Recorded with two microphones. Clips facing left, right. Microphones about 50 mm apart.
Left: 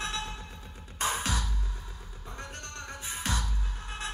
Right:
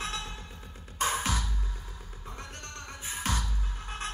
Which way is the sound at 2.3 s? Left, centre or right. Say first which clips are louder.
Left 2 dB; left.